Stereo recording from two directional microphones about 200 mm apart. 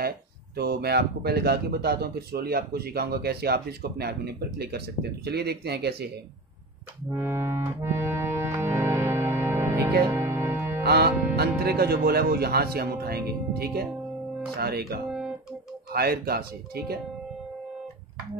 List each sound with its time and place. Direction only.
0.6 s speech: 50° right (ahead or behind)
7.1 s accordion: 10° right (ahead or behind)
10.0 s music: 15° right (ahead or behind)
10.8 s music: 50° right (ahead or behind)
11.3 s speech: 50° right (ahead or behind)